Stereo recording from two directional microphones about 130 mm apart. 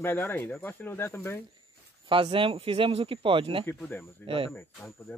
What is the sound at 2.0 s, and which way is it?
Speech, 40° right (ahead or behind).